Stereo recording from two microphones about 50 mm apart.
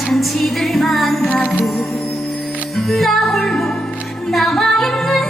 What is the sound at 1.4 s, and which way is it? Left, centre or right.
Music, left.